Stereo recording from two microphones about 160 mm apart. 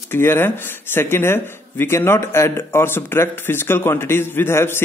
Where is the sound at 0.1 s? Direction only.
15° left (ahead or behind).